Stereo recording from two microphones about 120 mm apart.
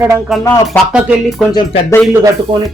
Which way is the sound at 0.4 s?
20° left (ahead or behind).